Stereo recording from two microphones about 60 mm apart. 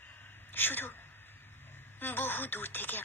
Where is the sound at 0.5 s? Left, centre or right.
Left.